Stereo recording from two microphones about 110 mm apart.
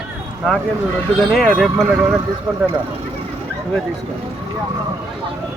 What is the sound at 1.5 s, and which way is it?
Speech, 15° right (ahead or behind).